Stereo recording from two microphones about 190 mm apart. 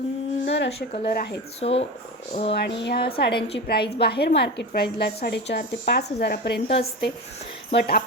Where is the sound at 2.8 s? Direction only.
55° left (ahead or behind).